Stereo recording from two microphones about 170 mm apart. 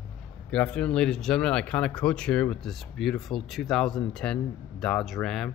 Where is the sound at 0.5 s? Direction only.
5° left (ahead or behind).